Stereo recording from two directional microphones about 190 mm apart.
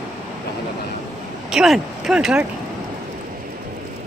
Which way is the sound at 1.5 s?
Centre (ahead or behind).